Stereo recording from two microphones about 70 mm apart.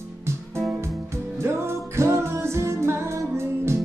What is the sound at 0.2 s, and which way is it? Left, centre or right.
Music, right.